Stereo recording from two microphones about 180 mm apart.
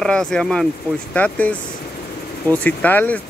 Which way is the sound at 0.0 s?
5° left (ahead or behind).